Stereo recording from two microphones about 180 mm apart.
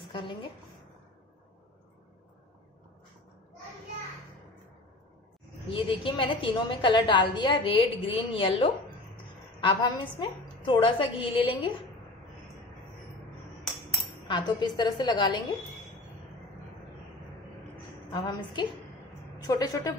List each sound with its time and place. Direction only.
0.1 s a sound: 25° left (ahead or behind)
5.7 s a woman's voice: 30° left (ahead or behind)
9.8 s a woman's voice: 25° left (ahead or behind)
14.3 s a woman's voice: 25° left (ahead or behind)
18.1 s a woman's voice: 25° left (ahead or behind)